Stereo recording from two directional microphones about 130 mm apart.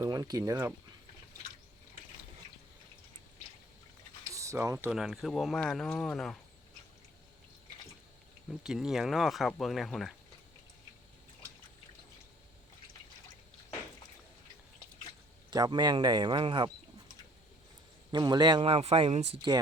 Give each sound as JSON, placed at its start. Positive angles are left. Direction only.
{"t": 0.0, "sound": "speech", "side_deg": -25}
{"t": 4.4, "sound": "speech", "side_deg": -25}
{"t": 4.9, "sound": "speech", "side_deg": -5}
{"t": 8.4, "sound": "speech", "side_deg": -5}
{"t": 15.4, "sound": "speech", "side_deg": -35}
{"t": 18.1, "sound": "speech", "side_deg": -30}
{"t": 18.7, "sound": "speech", "side_deg": -50}